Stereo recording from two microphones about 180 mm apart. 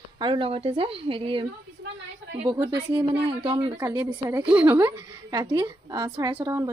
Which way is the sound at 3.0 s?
25° right (ahead or behind).